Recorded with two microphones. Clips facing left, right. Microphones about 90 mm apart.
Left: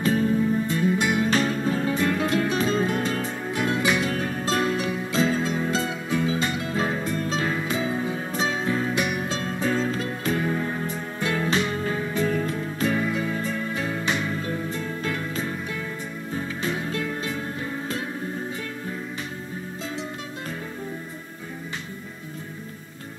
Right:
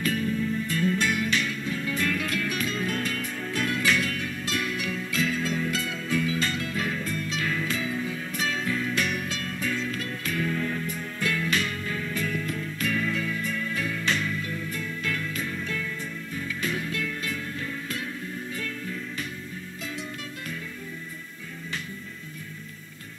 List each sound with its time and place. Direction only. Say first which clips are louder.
0.0 s music: left 6 dB; 30° left (ahead or behind)
1.3 s music: left 6 dB; 35° left (ahead or behind)
2.0 s music: left 6 dB; 25° left (ahead or behind)
4.1 s music: left 6 dB; 40° left (ahead or behind)
8.9 s music: left 3 dB; 20° left (ahead or behind)
14.0 s music: even; 20° left (ahead or behind)
14.3 s music: left 4 dB; 35° left (ahead or behind)